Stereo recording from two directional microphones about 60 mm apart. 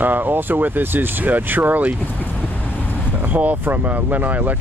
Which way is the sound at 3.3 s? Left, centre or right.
Right.